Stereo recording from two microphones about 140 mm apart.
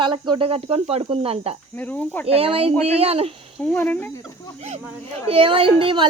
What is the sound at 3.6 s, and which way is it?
Speech, 10° left (ahead or behind).